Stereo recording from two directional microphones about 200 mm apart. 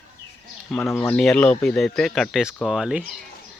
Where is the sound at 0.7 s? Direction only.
5° left (ahead or behind).